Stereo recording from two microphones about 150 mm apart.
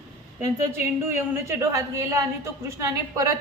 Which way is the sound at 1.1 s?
20° right (ahead or behind).